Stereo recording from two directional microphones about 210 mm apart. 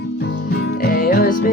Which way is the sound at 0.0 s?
55° left (ahead or behind).